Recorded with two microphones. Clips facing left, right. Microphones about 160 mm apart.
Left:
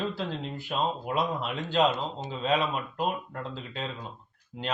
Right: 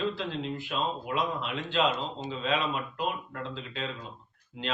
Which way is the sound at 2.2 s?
40° left (ahead or behind).